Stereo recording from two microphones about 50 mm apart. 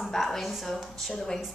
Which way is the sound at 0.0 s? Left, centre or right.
Centre.